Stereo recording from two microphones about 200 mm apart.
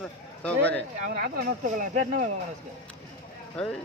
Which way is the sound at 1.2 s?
40° right (ahead or behind).